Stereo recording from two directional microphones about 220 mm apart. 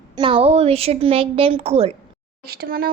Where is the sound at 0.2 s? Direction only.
25° right (ahead or behind).